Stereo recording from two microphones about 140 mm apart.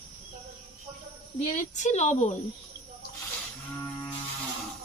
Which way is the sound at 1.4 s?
60° left (ahead or behind).